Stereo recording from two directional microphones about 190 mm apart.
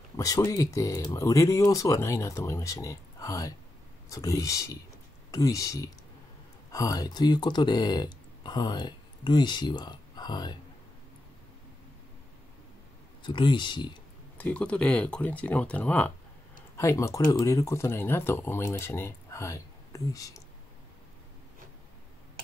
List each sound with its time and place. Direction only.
0.2 s speech: 20° left (ahead or behind)
13.2 s speech: 25° left (ahead or behind)
14.4 s speech: 5° left (ahead or behind)